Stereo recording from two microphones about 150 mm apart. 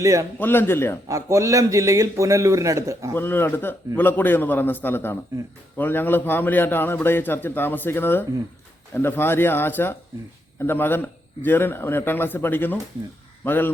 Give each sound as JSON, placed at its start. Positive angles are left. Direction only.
{"t": 0.0, "sound": "a man's voice", "side_deg": -20}
{"t": 0.3, "sound": "a man's voice", "side_deg": 15}
{"t": 1.0, "sound": "a man's voice", "side_deg": -20}
{"t": 3.2, "sound": "a man's voice", "side_deg": 15}